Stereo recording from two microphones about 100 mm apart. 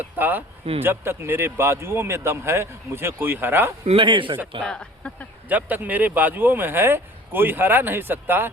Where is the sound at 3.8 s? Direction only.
60° right (ahead or behind).